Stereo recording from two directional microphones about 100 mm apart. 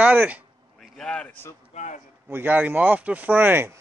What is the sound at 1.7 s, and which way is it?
Speech, 90° left.